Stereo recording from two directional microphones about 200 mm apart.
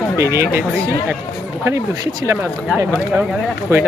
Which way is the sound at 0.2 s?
15° right (ahead or behind).